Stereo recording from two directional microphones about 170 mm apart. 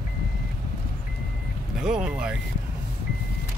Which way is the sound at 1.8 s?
5° right (ahead or behind).